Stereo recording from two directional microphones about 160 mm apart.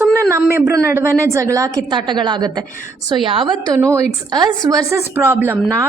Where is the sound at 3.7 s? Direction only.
20° right (ahead or behind).